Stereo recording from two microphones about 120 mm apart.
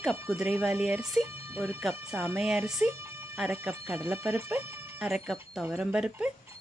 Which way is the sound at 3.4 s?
15° right (ahead or behind).